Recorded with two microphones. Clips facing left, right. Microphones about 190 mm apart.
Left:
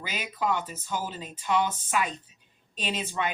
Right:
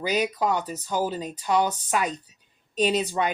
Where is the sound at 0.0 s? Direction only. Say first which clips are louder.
Right 7 dB; 40° right (ahead or behind).